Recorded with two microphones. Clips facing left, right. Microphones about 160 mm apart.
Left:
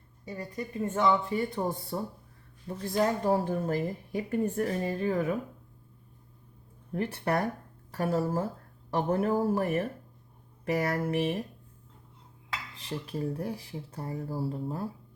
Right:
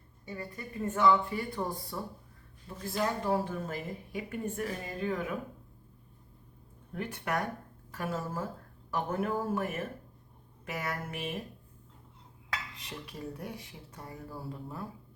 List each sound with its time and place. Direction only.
0.3 s speech: 20° left (ahead or behind)
1.9 s speech: 35° left (ahead or behind)
6.9 s speech: 30° left (ahead or behind)
12.7 s speech: 30° left (ahead or behind)